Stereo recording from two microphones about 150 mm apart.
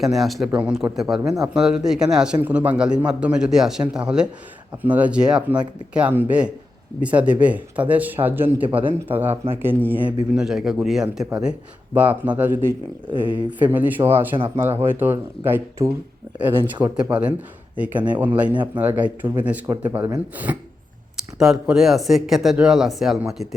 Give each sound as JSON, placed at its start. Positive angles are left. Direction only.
{"t": 0.0, "sound": "speech", "side_deg": 0}
{"t": 14.3, "sound": "speech", "side_deg": -35}
{"t": 14.8, "sound": "speech", "side_deg": -15}